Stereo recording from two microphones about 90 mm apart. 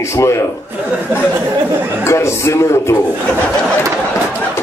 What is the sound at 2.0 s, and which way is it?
Speech, 30° left (ahead or behind).